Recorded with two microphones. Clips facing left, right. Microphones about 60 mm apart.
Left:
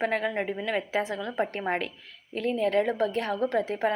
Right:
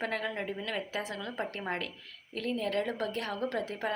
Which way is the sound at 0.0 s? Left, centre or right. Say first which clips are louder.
Left 7 dB; left.